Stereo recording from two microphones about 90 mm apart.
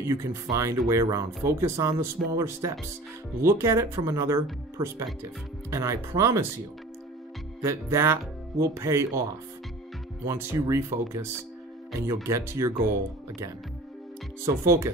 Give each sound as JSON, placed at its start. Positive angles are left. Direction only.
{"t": 0.0, "sound": "speech", "side_deg": -30}
{"t": 7.6, "sound": "speech", "side_deg": -30}
{"t": 14.4, "sound": "speech", "side_deg": -30}